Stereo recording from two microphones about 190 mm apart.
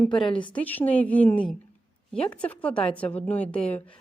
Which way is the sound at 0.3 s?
25° left (ahead or behind).